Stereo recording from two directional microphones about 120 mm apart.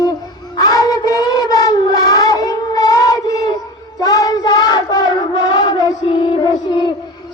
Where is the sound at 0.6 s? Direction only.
30° left (ahead or behind).